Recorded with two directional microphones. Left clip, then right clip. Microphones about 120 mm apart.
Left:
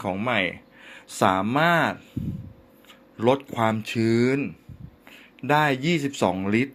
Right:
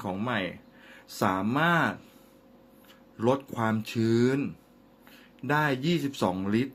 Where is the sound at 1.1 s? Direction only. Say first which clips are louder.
Left 6 dB; 30° left (ahead or behind).